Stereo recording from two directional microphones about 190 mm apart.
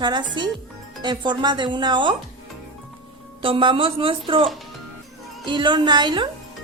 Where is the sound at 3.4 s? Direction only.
25° right (ahead or behind).